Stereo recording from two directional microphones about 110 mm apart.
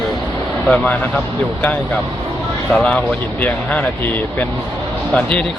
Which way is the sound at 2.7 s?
10° left (ahead or behind).